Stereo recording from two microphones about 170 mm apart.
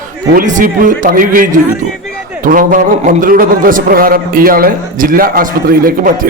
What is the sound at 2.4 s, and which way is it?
A man's voice, 55° right (ahead or behind).